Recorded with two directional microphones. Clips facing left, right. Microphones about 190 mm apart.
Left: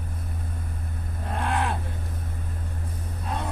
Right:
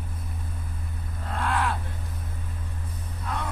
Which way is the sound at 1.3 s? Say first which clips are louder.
Even; 20° left (ahead or behind).